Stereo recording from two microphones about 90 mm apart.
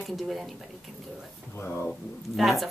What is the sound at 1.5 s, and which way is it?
Speech, 25° left (ahead or behind).